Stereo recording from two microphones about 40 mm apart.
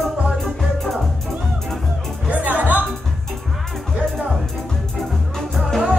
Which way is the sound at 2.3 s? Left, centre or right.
Right.